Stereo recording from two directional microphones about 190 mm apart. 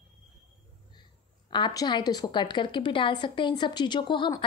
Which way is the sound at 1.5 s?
20° left (ahead or behind).